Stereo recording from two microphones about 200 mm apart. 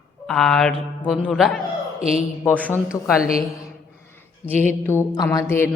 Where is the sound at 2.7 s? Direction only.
5° right (ahead or behind).